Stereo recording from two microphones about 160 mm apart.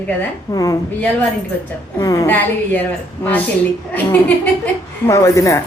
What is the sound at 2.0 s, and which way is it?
Speech, 20° left (ahead or behind).